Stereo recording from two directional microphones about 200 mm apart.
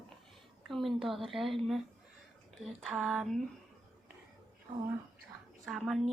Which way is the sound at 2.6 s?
Centre (ahead or behind).